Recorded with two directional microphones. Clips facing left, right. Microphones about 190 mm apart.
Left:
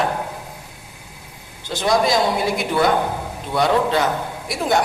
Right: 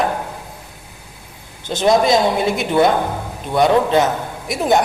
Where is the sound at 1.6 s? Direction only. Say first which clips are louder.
Right 4 dB; 20° right (ahead or behind).